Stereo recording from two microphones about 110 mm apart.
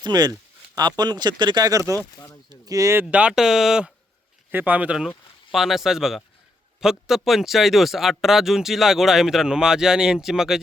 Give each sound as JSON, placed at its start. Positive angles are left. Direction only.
{"t": 0.0, "sound": "speech", "side_deg": -40}
{"t": 2.0, "sound": "speech", "side_deg": 25}
{"t": 2.5, "sound": "speech", "side_deg": -30}
{"t": 3.1, "sound": "speech", "side_deg": -10}